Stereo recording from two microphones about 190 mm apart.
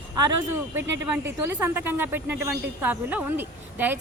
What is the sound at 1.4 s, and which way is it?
Speech, 10° right (ahead or behind).